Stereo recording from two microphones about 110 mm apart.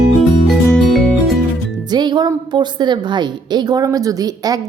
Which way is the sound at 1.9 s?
40° right (ahead or behind).